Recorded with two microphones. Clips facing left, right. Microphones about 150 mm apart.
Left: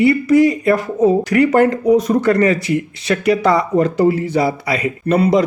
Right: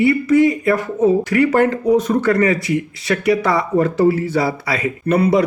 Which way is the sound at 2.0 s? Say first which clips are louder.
Left 2 dB; 35° left (ahead or behind).